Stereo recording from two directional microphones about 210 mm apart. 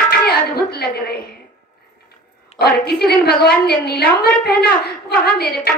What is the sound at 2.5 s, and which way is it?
A woman's voice, 50° left (ahead or behind).